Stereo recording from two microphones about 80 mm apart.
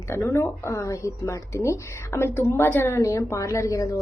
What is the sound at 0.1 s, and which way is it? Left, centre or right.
A woman's voice, left.